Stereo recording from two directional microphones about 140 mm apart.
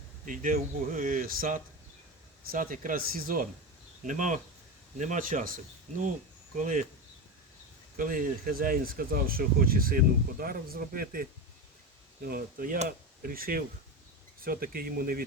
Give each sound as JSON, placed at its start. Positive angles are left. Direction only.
{"t": 0.3, "sound": "speech", "side_deg": -75}
{"t": 4.0, "sound": "speech", "side_deg": -65}
{"t": 6.6, "sound": "speech", "side_deg": -65}
{"t": 7.9, "sound": "speech", "side_deg": -75}